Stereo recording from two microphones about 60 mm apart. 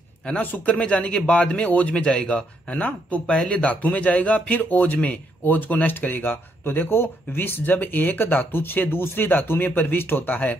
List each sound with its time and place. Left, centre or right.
0.3 s speech: left